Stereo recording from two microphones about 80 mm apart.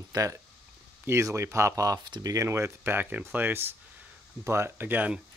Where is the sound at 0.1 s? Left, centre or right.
Right.